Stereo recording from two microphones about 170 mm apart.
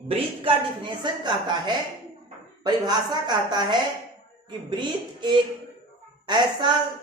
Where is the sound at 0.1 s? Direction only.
30° right (ahead or behind).